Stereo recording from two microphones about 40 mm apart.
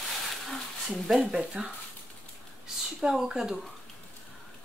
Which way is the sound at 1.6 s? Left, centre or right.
Right.